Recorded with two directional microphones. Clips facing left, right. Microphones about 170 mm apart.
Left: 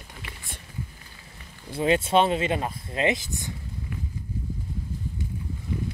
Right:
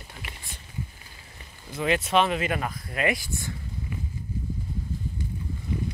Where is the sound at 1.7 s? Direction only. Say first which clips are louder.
Left 3 dB; 30° left (ahead or behind).